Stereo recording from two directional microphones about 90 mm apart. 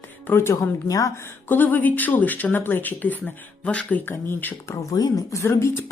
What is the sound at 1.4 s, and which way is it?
Speech, 20° left (ahead or behind).